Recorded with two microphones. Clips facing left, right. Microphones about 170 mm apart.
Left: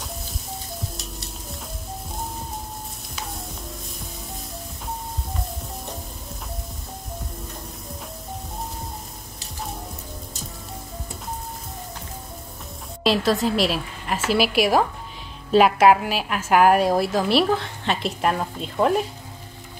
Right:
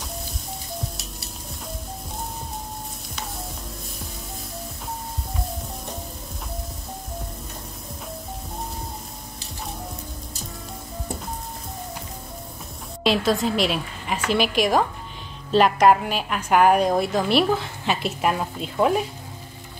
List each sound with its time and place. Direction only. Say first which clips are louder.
13.0 s a woman's voice: left 1 dB; centre (ahead or behind)